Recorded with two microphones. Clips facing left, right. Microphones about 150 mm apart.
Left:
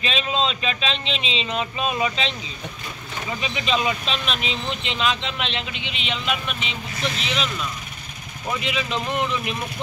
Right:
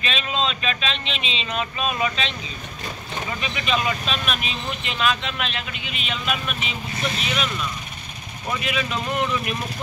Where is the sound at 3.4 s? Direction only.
20° left (ahead or behind).